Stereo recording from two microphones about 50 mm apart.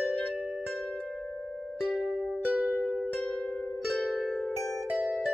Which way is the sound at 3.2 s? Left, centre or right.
Left.